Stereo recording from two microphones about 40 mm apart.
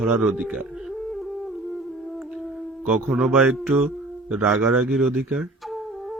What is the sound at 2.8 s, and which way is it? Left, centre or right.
Speech, centre.